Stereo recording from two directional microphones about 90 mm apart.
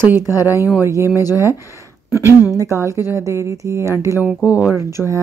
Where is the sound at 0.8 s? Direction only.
30° right (ahead or behind).